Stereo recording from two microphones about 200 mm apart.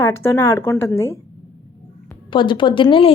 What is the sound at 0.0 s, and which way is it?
A woman's voice, 15° left (ahead or behind).